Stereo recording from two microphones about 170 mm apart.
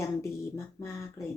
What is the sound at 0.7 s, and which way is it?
Speech, 15° left (ahead or behind).